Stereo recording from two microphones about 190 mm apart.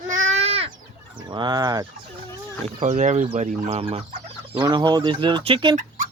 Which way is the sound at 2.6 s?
40° right (ahead or behind).